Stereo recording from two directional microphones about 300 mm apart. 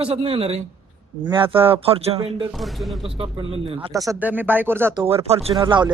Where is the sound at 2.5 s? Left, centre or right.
Centre.